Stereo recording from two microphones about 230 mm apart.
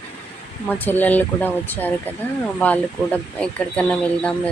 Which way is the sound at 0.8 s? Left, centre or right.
Centre.